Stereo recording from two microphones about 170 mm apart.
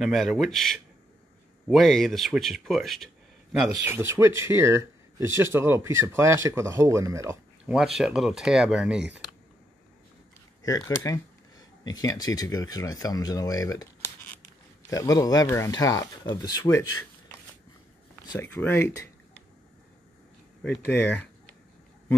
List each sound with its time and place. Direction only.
0.0 s speech: centre (ahead or behind)
3.7 s speech: 15° right (ahead or behind)
7.7 s speech: centre (ahead or behind)
10.6 s speech: 20° left (ahead or behind)
14.9 s speech: 20° left (ahead or behind)
18.3 s speech: 15° left (ahead or behind)
20.6 s speech: 15° left (ahead or behind)